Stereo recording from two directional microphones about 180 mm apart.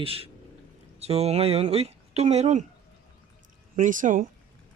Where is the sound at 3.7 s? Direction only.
45° right (ahead or behind).